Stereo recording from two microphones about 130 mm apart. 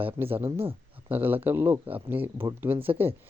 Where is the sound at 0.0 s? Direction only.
15° right (ahead or behind).